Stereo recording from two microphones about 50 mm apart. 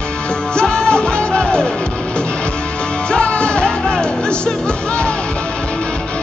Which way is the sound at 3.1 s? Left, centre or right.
Centre.